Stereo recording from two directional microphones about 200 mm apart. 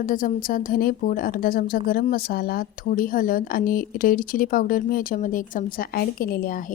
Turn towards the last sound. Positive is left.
turn(degrees=45)  # may be behind; listen again after turning